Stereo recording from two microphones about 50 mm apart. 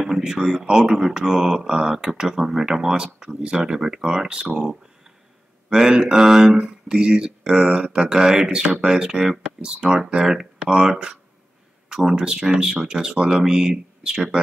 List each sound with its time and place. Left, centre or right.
0.2 s speech: centre
5.7 s speech: centre